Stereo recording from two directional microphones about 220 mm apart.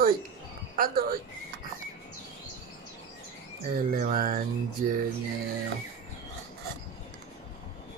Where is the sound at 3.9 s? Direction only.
40° right (ahead or behind).